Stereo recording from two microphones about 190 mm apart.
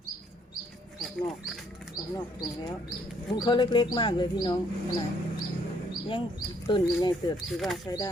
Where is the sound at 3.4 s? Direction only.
25° left (ahead or behind).